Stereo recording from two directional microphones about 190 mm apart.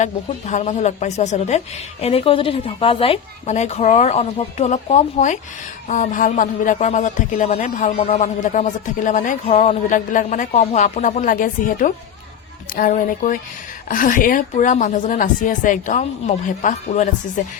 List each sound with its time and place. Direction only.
0.0 s a woman's voice: 40° left (ahead or behind)